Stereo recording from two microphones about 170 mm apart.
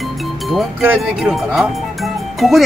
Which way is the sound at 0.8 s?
5° right (ahead or behind).